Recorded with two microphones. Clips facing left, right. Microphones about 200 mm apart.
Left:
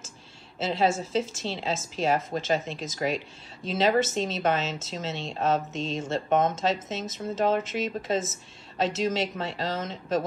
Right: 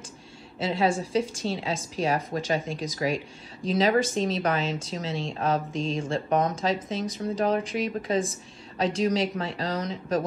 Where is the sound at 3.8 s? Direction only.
25° left (ahead or behind).